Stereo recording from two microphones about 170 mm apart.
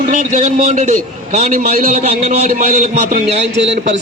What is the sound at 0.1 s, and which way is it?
A man's voice, 50° right (ahead or behind).